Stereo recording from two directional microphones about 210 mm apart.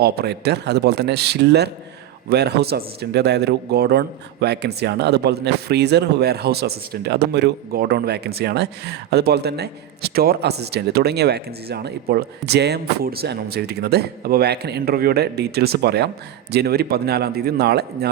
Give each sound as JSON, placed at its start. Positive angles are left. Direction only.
{"t": 0.0, "sound": "a man's voice", "side_deg": -50}